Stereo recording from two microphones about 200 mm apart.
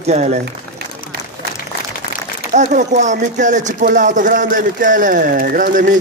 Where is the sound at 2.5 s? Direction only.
35° right (ahead or behind).